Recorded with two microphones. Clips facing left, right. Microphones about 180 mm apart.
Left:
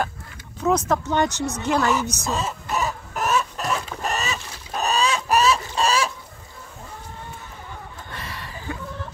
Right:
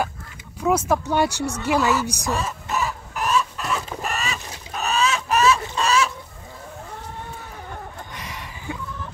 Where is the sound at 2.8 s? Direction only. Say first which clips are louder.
Left 1 dB; 45° left (ahead or behind).